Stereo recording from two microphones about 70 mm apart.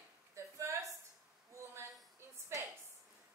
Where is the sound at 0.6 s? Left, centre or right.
Right.